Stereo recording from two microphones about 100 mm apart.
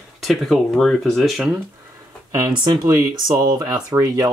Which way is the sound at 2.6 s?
45° right (ahead or behind).